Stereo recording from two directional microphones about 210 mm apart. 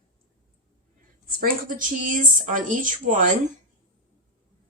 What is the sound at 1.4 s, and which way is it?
A woman's voice, 40° right (ahead or behind).